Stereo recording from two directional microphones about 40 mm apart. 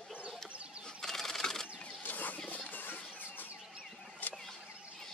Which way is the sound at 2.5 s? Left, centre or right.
Left.